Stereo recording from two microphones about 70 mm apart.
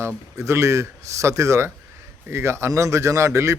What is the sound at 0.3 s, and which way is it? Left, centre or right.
A man's voice, right.